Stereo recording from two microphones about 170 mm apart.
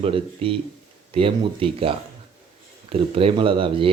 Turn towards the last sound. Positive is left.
turn(degrees=-30)  # may be behind; listen again after turning